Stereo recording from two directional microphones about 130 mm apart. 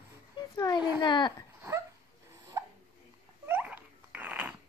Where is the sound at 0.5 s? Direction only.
30° left (ahead or behind).